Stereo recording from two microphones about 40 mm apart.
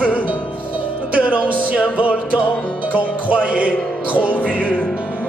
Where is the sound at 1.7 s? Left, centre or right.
Left.